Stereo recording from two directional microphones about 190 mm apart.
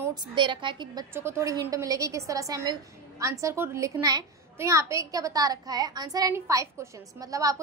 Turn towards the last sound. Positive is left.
turn(degrees=-20)  # may be behind; listen again after turning